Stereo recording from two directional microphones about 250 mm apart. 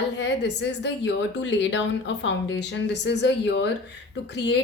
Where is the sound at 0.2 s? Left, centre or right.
Left.